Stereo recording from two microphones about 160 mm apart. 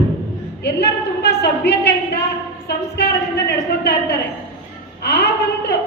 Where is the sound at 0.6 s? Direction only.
90° left.